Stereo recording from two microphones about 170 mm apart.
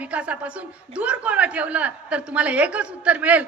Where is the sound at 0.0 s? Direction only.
10° right (ahead or behind).